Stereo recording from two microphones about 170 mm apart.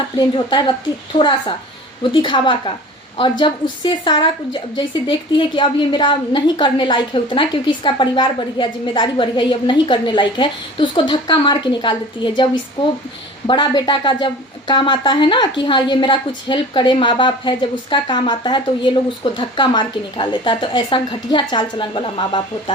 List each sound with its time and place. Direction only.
0.2 s a woman's voice: 25° left (ahead or behind)
13.5 s a woman's voice: 25° left (ahead or behind)